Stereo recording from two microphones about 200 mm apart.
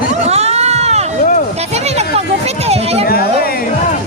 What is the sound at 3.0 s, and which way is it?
Speech, 50° left (ahead or behind).